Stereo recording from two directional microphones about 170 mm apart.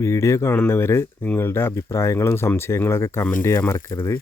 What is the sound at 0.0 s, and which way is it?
Speech, 15° left (ahead or behind).